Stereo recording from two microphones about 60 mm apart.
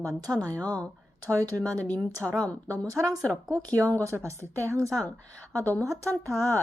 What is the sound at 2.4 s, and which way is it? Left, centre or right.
Speech, left.